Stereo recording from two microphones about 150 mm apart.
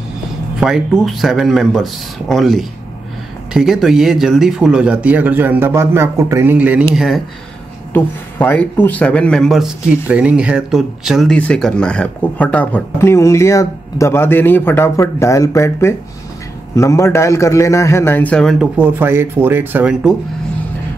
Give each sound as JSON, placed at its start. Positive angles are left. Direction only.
{"t": 0.6, "sound": "speech", "side_deg": -5}
{"t": 7.9, "sound": "a man's voice", "side_deg": 15}
{"t": 18.8, "sound": "speech", "side_deg": -15}